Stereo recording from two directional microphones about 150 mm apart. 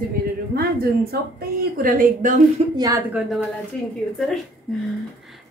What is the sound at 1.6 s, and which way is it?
Speech, 70° right (ahead or behind).